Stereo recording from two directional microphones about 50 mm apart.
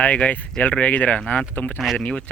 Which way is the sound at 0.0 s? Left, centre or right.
Left.